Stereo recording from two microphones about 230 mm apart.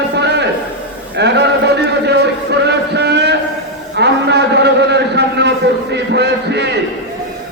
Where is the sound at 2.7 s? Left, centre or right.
Right.